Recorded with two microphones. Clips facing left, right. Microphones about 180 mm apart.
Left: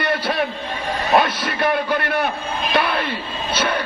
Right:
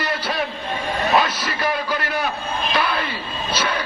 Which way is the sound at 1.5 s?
55° left (ahead or behind).